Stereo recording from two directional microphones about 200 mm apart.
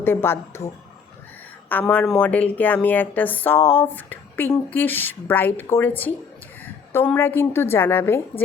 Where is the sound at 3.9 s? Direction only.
10° left (ahead or behind).